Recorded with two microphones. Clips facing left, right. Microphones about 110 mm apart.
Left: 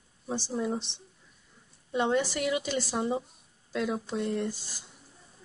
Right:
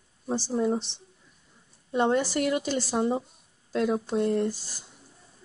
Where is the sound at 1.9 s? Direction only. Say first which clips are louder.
Right 3 dB; 40° right (ahead or behind).